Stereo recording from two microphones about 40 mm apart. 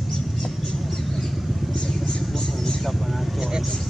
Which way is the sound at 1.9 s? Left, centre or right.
Centre.